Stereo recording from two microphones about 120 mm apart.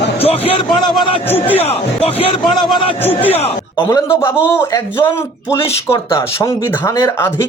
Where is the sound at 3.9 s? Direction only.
20° left (ahead or behind).